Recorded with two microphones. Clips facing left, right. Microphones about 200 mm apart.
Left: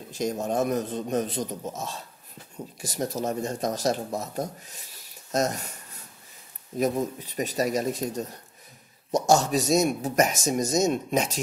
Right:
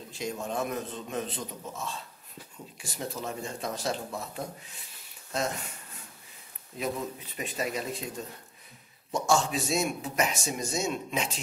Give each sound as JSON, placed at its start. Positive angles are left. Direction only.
{"t": 0.1, "sound": "speech", "side_deg": 40}
{"t": 6.8, "sound": "speech", "side_deg": 40}